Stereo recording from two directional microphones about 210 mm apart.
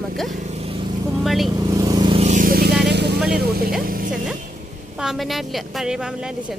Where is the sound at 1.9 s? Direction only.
25° right (ahead or behind); by 3.2 s 55° right (ahead or behind).